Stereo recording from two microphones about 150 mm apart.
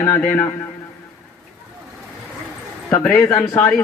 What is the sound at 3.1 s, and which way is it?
Speech, 15° left (ahead or behind).